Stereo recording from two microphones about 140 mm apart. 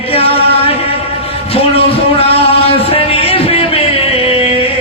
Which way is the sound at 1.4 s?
45° left (ahead or behind).